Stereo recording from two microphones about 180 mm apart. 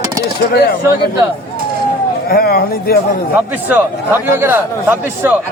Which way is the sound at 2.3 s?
55° left (ahead or behind).